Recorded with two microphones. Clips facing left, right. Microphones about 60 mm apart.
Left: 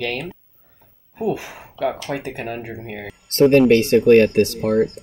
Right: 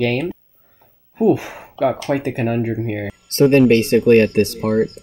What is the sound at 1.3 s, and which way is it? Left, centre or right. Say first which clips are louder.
Speech: right 5 dB; right.